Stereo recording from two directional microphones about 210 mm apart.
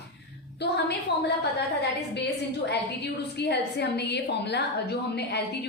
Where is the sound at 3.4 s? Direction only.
55° left (ahead or behind).